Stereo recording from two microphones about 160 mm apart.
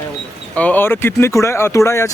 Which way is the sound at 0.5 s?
10° left (ahead or behind).